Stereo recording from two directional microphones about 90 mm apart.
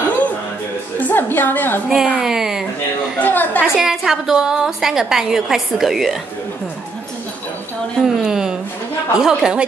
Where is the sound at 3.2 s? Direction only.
20° left (ahead or behind).